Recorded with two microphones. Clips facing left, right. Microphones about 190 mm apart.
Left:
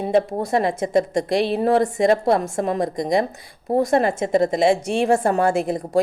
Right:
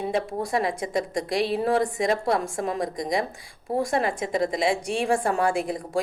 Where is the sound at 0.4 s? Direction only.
25° left (ahead or behind).